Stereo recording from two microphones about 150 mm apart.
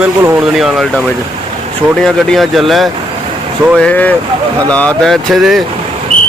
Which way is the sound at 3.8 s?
10° left (ahead or behind).